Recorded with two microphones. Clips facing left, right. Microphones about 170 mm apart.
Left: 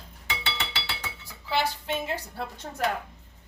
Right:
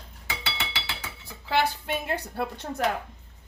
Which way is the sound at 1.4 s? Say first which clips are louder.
Right 2 dB; 55° right (ahead or behind).